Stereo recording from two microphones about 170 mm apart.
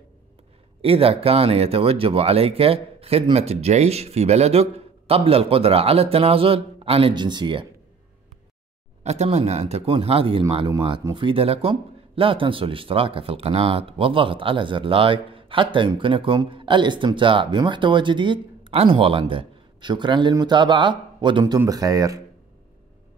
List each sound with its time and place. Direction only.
0.8 s speech: 35° right (ahead or behind)
9.0 s speech: 40° right (ahead or behind); by 22.2 s 20° right (ahead or behind)